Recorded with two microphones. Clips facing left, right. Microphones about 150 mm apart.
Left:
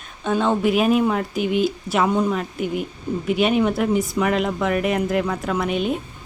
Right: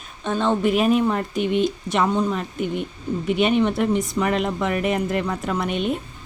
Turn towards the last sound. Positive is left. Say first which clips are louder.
# left 1 dB
turn(degrees=0)  # may be behind; listen again after turning